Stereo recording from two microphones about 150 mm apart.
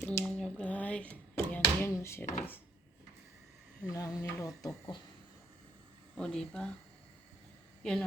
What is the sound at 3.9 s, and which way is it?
Speech, 25° left (ahead or behind).